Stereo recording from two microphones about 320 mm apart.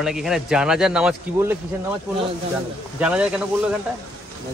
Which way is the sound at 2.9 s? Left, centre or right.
Centre.